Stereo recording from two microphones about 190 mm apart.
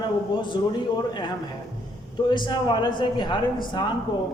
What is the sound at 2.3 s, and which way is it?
A woman's voice, 25° left (ahead or behind).